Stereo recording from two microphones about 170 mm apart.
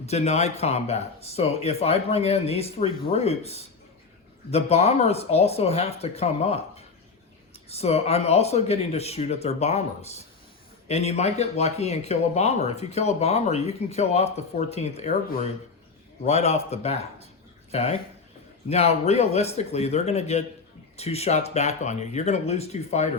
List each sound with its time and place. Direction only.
0.0 s speech: 40° left (ahead or behind)
10.8 s speech: 40° left (ahead or behind)
16.2 s speech: 40° left (ahead or behind)